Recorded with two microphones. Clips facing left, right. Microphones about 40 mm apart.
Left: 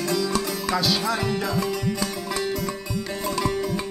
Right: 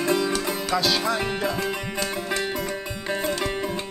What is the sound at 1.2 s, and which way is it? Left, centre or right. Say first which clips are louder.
Music: left 1 dB; right.